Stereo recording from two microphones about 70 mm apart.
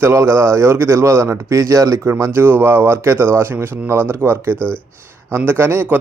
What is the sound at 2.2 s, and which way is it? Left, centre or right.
Speech, right.